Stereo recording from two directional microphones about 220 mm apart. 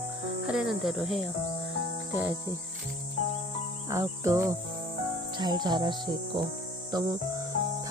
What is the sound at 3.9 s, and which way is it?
Cricket, 15° right (ahead or behind).